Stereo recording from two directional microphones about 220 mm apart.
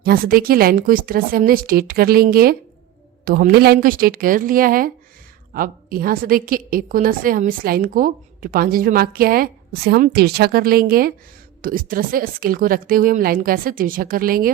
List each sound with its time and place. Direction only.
0.0 s a woman's voice: 45° right (ahead or behind)